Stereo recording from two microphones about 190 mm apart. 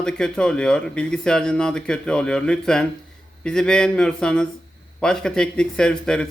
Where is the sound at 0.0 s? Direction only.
5° left (ahead or behind).